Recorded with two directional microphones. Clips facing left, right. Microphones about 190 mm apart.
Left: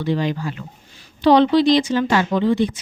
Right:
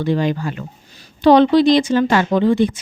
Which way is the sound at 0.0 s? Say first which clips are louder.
Right 3 dB; 50° right (ahead or behind).